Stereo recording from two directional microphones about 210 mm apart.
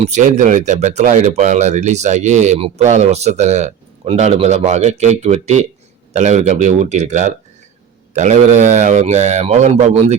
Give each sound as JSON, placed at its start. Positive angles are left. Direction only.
{"t": 0.0, "sound": "speech", "side_deg": -35}